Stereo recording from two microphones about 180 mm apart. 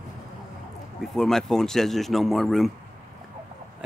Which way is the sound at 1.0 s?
Centre (ahead or behind).